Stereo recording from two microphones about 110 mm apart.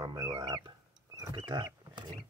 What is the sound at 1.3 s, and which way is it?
Wild animals, 45° right (ahead or behind).